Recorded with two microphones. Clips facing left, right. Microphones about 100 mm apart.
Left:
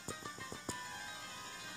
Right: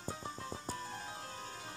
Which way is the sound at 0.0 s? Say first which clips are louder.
Right 4 dB; 40° right (ahead or behind).